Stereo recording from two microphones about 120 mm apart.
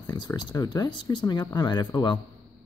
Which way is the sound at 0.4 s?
35° left (ahead or behind).